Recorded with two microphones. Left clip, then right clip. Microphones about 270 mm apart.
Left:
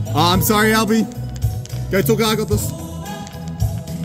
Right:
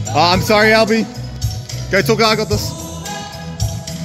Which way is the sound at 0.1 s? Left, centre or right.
Centre.